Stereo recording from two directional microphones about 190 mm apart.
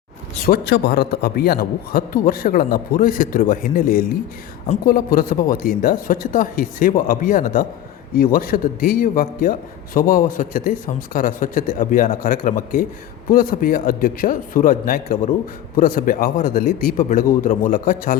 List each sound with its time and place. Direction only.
0.4 s a man's voice: 55° left (ahead or behind)